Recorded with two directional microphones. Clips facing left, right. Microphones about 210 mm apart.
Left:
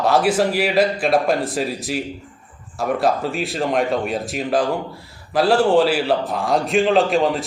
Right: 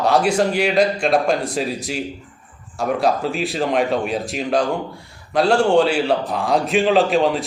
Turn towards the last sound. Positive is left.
turn(degrees=0)  # may be behind; listen again after turning